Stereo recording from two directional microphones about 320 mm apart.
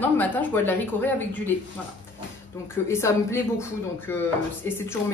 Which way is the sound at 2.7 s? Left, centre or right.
Centre.